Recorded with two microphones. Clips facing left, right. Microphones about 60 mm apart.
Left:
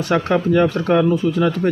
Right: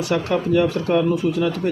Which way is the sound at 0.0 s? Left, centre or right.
Left.